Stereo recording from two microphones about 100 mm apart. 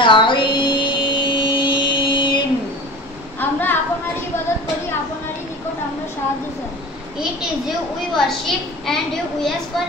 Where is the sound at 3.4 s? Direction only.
20° left (ahead or behind).